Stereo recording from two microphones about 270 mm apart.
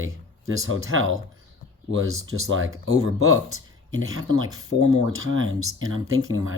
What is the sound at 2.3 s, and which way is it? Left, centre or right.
Speech, right.